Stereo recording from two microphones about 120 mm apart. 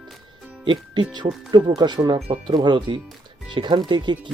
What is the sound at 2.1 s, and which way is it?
Speech, 55° right (ahead or behind).